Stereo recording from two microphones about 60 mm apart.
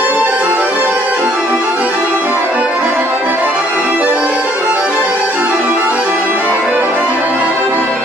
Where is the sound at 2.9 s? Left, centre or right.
Right.